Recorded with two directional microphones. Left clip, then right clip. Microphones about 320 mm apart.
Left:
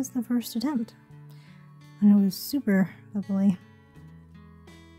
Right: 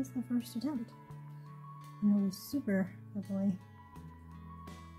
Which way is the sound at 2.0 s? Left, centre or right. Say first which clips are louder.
Left 11 dB; left.